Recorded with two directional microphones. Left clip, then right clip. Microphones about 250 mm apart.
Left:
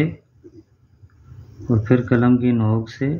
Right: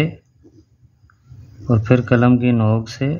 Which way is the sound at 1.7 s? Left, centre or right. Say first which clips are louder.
Right 2 dB; right.